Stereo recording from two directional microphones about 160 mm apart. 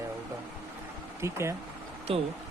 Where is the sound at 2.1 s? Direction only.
35° right (ahead or behind).